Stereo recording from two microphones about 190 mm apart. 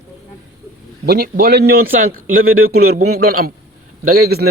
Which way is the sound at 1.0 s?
50° right (ahead or behind).